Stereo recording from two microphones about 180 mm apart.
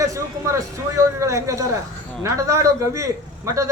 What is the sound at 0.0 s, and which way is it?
A man's voice, 15° right (ahead or behind).